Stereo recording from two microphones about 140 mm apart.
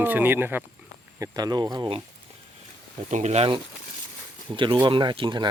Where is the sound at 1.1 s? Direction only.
25° right (ahead or behind).